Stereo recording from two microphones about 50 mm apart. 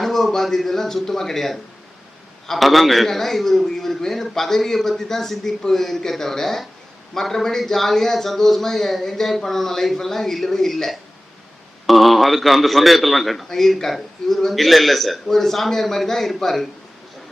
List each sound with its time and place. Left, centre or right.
0.0 s a man's voice: centre